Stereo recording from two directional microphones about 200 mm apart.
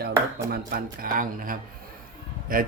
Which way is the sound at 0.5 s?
50° right (ahead or behind).